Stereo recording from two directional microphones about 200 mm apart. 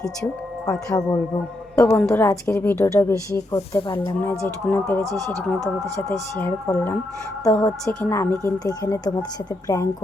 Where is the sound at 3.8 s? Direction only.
25° left (ahead or behind).